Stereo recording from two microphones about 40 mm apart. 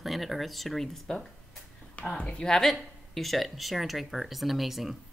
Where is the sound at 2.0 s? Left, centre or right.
Left.